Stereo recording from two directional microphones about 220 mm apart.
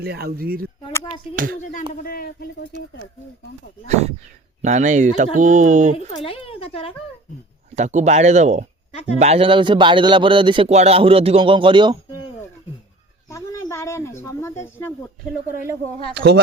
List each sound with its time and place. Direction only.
0.0 s speech: 45° right (ahead or behind)
1.9 s speech: 40° left (ahead or behind)
4.6 s speech: 35° right (ahead or behind)
6.2 s speech: 25° left (ahead or behind)
7.8 s a man's voice: 30° right (ahead or behind)
12.1 s a sound: 20° left (ahead or behind)
13.3 s speech: 15° left (ahead or behind)
16.1 s speech: 50° right (ahead or behind)